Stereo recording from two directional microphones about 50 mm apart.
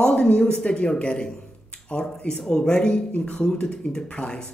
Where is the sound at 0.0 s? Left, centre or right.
Centre.